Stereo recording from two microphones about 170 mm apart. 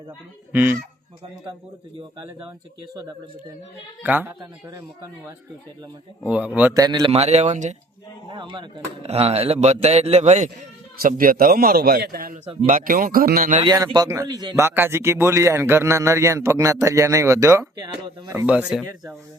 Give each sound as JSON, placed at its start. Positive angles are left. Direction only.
{"t": 0.5, "sound": "speech", "side_deg": -10}
{"t": 4.0, "sound": "speech", "side_deg": -10}
{"t": 4.4, "sound": "a man's voice", "side_deg": -20}
{"t": 6.2, "sound": "speech", "side_deg": -10}
{"t": 6.7, "sound": "a man's voice", "side_deg": -20}
{"t": 7.1, "sound": "a man's voice", "side_deg": -40}
{"t": 8.3, "sound": "a man's voice", "side_deg": -30}
{"t": 11.0, "sound": "a man's voice", "side_deg": -55}
{"t": 13.9, "sound": "speech", "side_deg": -20}